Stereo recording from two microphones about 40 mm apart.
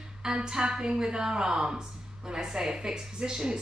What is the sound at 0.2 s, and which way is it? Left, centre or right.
A woman's voice, centre.